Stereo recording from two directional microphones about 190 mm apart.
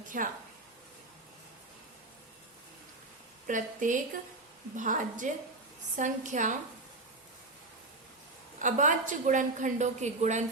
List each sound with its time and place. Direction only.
0.1 s a woman's voice: 45° right (ahead or behind)
3.4 s a woman's voice: 45° right (ahead or behind)
8.5 s a woman's voice: 40° right (ahead or behind)